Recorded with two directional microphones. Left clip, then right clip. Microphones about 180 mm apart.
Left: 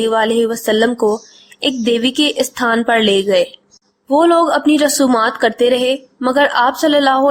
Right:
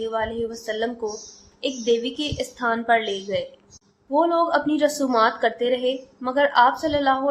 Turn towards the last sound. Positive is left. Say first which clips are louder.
# left 9 dB
turn(degrees=40)  # may be behind; listen again after turning